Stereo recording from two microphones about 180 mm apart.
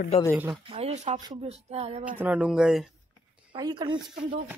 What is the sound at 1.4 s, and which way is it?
Speech, 35° right (ahead or behind).